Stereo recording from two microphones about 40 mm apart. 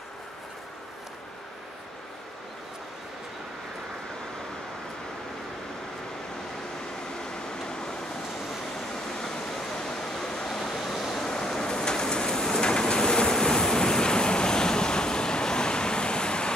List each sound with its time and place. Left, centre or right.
7.2 s vehicle: centre
8.9 s waterfall: centre
10.7 s vehicle: centre; by 16.5 s left